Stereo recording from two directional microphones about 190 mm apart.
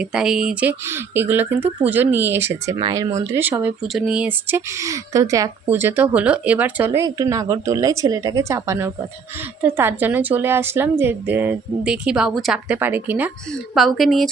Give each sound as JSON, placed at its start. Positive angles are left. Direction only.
{"t": 0.0, "sound": "speech", "side_deg": -5}